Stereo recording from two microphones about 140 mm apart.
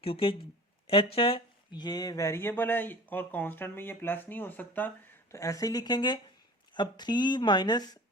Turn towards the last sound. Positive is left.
turn(degrees=30)  # may be behind; listen again after turning